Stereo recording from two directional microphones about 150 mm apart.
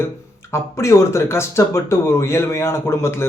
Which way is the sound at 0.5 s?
20° left (ahead or behind).